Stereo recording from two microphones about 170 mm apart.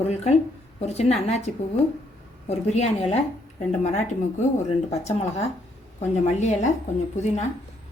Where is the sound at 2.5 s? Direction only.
40° left (ahead or behind).